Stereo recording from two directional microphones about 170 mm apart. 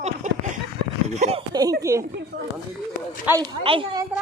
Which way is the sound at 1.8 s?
15° right (ahead or behind).